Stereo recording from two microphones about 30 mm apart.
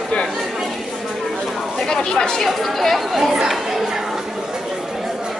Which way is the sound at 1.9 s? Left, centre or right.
Left.